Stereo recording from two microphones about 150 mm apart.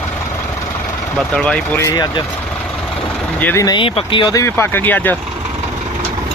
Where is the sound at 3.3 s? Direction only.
10° left (ahead or behind).